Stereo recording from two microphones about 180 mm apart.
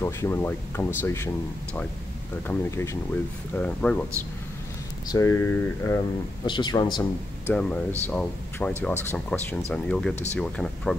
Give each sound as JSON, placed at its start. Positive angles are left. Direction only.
{"t": 0.0, "sound": "speech", "side_deg": 15}
{"t": 2.4, "sound": "speech", "side_deg": 15}
{"t": 5.0, "sound": "speech", "side_deg": 20}
{"t": 6.4, "sound": "speech", "side_deg": 25}
{"t": 7.4, "sound": "speech", "side_deg": 5}